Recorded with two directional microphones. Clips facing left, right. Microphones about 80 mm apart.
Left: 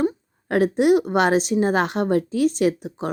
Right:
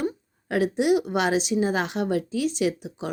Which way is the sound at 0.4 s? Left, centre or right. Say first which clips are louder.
Left 5 dB; left.